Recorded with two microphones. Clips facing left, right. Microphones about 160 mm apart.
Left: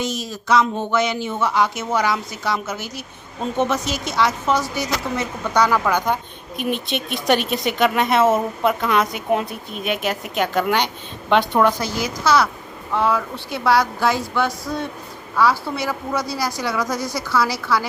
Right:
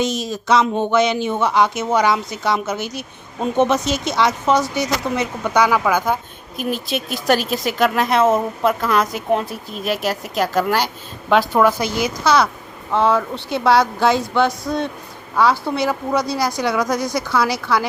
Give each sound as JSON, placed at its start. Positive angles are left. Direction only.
{"t": 0.0, "sound": "speech", "side_deg": -20}
{"t": 11.8, "sound": "speech", "side_deg": -20}